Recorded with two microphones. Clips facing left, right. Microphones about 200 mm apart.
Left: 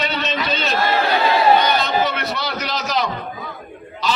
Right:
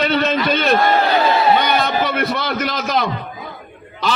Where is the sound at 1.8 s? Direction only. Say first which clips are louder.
Right 2 dB; 55° right (ahead or behind).